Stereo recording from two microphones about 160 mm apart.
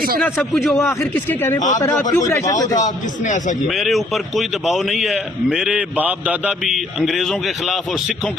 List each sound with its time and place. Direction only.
0.3 s a man's voice: centre (ahead or behind)
0.8 s a man's voice: 15° left (ahead or behind)
2.7 s a man's voice: 50° left (ahead or behind)
3.7 s a man's voice: centre (ahead or behind)